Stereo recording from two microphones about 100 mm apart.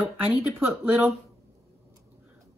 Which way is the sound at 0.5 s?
25° right (ahead or behind).